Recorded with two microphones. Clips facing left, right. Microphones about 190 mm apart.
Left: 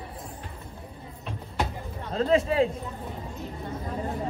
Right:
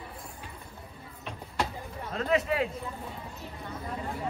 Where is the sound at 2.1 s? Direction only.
30° left (ahead or behind).